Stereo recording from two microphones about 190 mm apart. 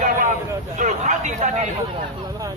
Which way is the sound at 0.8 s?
40° right (ahead or behind).